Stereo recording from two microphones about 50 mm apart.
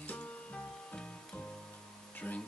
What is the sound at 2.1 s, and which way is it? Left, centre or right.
Speech, left.